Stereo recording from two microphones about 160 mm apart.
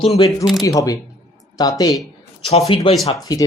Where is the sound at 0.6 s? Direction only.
20° left (ahead or behind).